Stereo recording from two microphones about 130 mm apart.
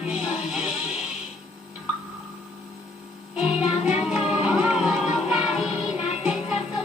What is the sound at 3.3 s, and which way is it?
Music, 5° right (ahead or behind).